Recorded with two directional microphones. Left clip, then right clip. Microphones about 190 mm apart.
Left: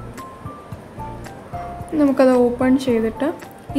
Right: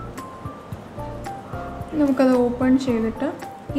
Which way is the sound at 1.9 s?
25° left (ahead or behind).